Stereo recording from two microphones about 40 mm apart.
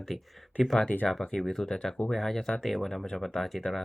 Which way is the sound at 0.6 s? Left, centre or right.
Centre.